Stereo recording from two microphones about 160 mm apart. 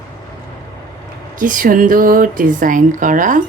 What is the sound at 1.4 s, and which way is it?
Speech, 55° right (ahead or behind).